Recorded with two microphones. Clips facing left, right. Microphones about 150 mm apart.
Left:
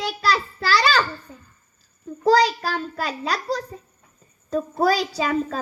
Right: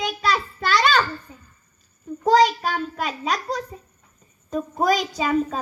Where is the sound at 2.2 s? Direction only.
35° left (ahead or behind).